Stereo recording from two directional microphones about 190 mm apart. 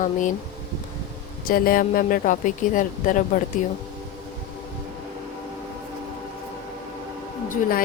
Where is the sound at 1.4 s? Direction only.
50° left (ahead or behind).